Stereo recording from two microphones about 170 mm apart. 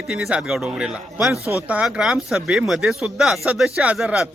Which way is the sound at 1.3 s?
15° left (ahead or behind).